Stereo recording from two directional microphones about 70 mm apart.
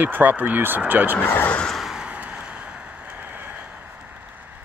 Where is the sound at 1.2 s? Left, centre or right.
Left.